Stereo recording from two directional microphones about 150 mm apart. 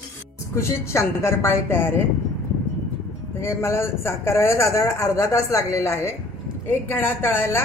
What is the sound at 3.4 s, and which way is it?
A man's voice, 15° left (ahead or behind).